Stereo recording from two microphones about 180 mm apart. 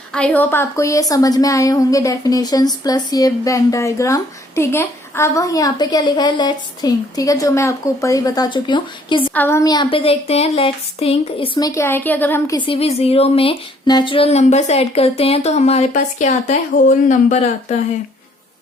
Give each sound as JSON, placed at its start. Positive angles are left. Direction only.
{"t": 0.1, "sound": "a woman's voice", "side_deg": 5}
{"t": 9.3, "sound": "a woman's voice", "side_deg": 10}
{"t": 12.5, "sound": "speech", "side_deg": 30}